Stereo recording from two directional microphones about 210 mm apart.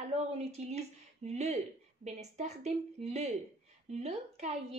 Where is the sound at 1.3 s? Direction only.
30° right (ahead or behind).